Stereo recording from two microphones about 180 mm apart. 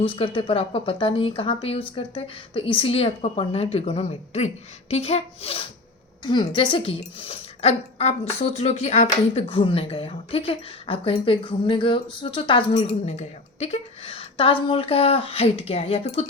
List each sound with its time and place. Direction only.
0.0 s a woman's voice: 30° left (ahead or behind)